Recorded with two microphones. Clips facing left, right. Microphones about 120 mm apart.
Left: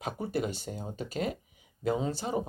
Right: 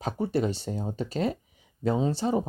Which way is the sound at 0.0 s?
30° right (ahead or behind).